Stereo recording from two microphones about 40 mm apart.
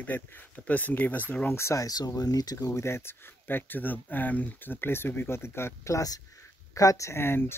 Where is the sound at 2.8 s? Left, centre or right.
Left.